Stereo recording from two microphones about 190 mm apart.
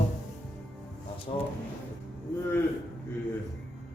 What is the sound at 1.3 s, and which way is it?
Speech, 30° left (ahead or behind).